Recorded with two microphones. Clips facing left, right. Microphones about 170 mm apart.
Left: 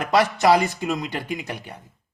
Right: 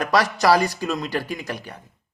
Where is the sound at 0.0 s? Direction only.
25° left (ahead or behind).